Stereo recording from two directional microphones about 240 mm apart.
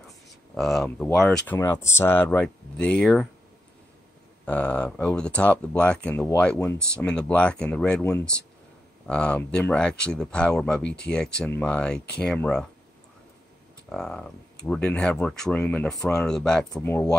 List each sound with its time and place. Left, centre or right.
0.6 s speech: centre
4.5 s speech: centre
10.8 s speech: left
11.1 s speech: centre
13.8 s speech: centre